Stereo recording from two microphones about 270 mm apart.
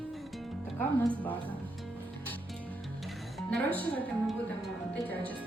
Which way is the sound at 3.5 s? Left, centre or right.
Centre.